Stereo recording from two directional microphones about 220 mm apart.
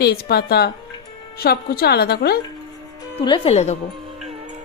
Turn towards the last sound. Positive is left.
turn(degrees=30)  # may be behind; listen again after turning